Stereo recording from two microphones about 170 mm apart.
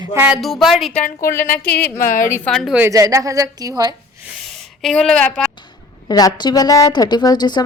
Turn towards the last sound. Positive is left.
turn(degrees=25)  # may be behind; listen again after turning